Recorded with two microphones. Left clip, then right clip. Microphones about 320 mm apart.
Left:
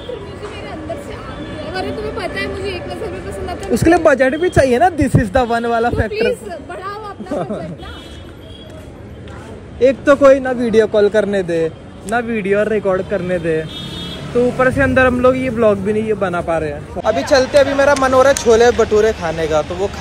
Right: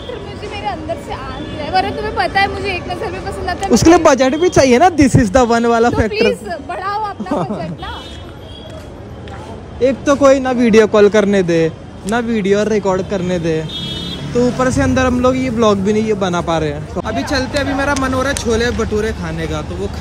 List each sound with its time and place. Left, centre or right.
0.7 s speech: centre
3.8 s a man's voice: centre
6.1 s a woman's voice: centre
9.8 s a man's voice: centre
17.0 s speech: centre